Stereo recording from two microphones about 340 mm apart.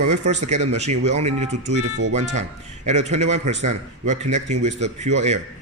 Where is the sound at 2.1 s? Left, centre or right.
Centre.